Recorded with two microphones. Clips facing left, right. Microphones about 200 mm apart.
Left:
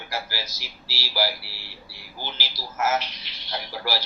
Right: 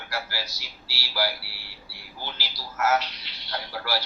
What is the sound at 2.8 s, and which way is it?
A man's voice, 15° left (ahead or behind).